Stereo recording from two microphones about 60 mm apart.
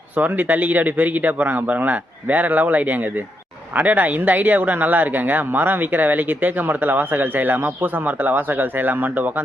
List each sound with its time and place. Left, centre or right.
0.2 s speech: right